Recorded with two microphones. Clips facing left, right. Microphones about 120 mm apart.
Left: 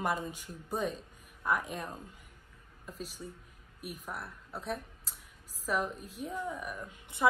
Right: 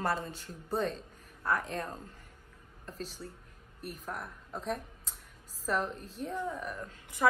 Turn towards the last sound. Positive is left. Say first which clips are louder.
# right 1 dB
turn(degrees=10)  # may be behind; listen again after turning